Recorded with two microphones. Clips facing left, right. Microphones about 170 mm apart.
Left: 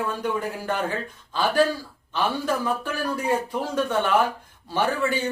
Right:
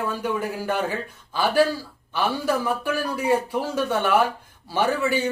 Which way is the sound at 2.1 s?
10° right (ahead or behind).